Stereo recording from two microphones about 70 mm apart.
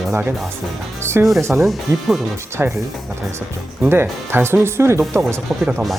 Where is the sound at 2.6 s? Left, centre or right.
Right.